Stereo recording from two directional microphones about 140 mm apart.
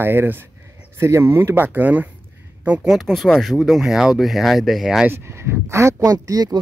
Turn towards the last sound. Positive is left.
turn(degrees=-25)  # may be behind; listen again after turning